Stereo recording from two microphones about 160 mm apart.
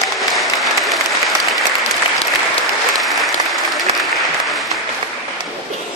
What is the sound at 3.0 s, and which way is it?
Applause, centre (ahead or behind).